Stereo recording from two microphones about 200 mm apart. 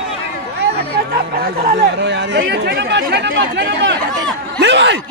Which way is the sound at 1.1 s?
50° right (ahead or behind).